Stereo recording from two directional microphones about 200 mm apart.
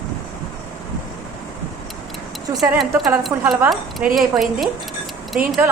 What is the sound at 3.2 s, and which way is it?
Speech, centre (ahead or behind).